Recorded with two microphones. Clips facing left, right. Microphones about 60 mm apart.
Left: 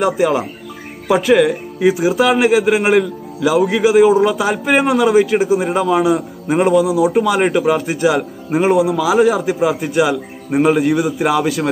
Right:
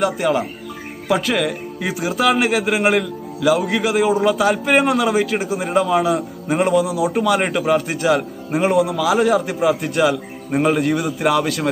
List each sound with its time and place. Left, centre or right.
1.0 s a man's voice: centre